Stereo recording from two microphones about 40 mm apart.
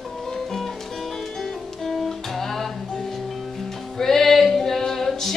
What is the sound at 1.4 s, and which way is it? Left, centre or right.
Music, centre.